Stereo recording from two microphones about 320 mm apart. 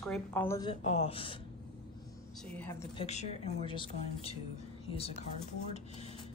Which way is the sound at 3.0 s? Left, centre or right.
Centre.